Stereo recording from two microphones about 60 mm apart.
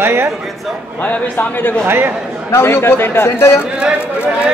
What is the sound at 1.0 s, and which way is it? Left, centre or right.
Speech, left.